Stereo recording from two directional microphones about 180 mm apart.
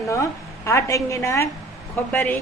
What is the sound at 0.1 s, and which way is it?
A woman's voice, 15° left (ahead or behind).